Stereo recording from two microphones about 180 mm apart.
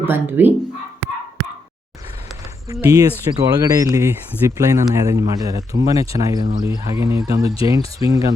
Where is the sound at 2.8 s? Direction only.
20° right (ahead or behind).